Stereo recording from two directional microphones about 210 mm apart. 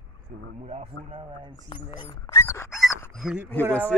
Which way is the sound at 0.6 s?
30° right (ahead or behind).